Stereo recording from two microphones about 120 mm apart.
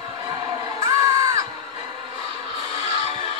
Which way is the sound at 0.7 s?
25° right (ahead or behind).